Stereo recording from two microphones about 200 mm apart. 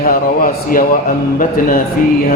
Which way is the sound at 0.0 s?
45° left (ahead or behind).